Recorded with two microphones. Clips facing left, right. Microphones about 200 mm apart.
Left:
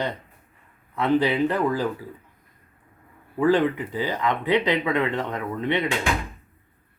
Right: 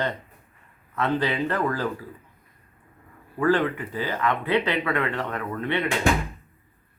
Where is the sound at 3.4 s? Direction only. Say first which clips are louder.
Left 2 dB; 15° left (ahead or behind).